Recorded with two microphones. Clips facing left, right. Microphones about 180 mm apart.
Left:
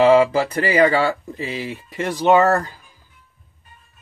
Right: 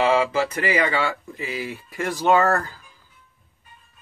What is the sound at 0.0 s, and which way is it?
Speech, 35° left (ahead or behind).